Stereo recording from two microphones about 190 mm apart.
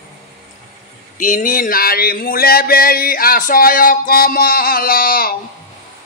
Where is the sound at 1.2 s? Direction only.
45° left (ahead or behind).